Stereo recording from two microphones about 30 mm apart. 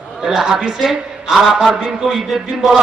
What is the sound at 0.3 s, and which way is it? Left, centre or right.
A man's voice, centre.